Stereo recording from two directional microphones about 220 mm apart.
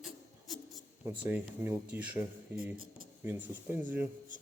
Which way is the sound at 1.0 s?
20° right (ahead or behind).